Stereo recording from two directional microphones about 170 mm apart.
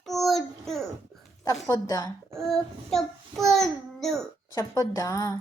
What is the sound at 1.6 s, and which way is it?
Speech, 20° left (ahead or behind).